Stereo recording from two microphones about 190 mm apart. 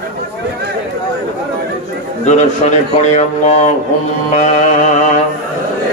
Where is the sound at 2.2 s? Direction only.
40° left (ahead or behind).